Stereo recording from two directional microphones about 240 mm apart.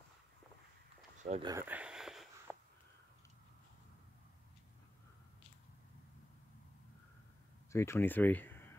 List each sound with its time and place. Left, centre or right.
1.2 s speech: right
1.5 s a sound: centre
7.7 s speech: centre